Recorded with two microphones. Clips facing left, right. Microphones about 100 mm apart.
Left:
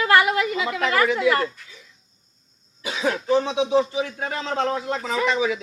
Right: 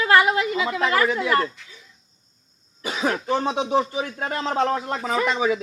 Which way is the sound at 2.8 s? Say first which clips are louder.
Even; 40° right (ahead or behind).